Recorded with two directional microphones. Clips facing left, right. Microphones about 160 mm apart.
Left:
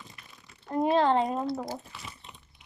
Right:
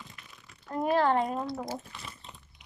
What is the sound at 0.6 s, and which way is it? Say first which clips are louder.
Speech: left 2 dB; 25° left (ahead or behind).